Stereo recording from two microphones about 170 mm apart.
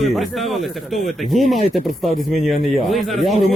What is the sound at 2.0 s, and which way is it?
Speech, 45° right (ahead or behind).